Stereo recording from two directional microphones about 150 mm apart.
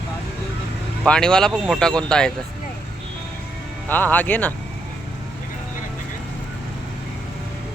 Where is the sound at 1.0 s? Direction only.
5° left (ahead or behind).